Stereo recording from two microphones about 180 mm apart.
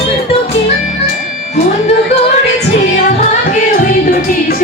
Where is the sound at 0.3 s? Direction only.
35° left (ahead or behind).